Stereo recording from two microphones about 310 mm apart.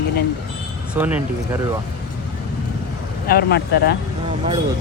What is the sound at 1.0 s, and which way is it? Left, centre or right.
Speech, centre.